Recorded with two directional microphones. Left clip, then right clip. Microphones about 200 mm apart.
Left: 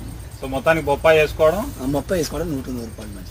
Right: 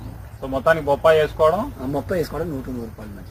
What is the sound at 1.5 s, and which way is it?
Speech, 5° right (ahead or behind).